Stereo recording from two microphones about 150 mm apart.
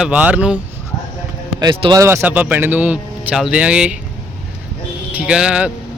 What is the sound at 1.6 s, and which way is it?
Speech, 30° right (ahead or behind).